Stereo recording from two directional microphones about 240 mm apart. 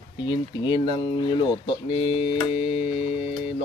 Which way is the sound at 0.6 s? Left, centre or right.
Centre.